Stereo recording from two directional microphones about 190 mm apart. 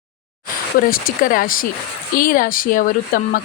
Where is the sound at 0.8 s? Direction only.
50° left (ahead or behind).